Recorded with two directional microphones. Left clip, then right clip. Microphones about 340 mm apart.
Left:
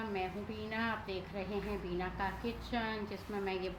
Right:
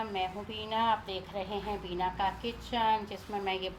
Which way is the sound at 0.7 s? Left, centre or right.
Right.